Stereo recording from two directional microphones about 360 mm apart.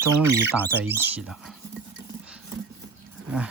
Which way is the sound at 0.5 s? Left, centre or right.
Centre.